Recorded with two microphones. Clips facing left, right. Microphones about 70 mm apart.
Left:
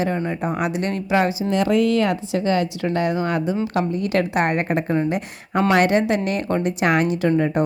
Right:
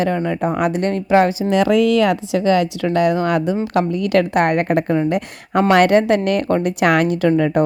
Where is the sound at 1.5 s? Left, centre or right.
Right.